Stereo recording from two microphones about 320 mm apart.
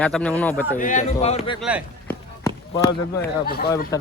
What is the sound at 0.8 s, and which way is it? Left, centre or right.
Speech, left.